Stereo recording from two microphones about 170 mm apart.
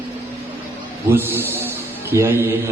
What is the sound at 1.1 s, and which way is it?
A man's voice, 15° right (ahead or behind).